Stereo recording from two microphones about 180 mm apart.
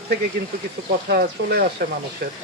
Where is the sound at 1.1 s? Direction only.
65° right (ahead or behind).